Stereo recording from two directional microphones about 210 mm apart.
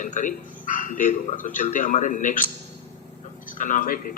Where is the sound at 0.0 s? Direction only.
35° left (ahead or behind).